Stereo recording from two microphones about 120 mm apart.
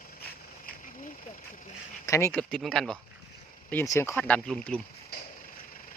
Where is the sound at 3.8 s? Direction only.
25° left (ahead or behind); by 4.8 s 5° left (ahead or behind).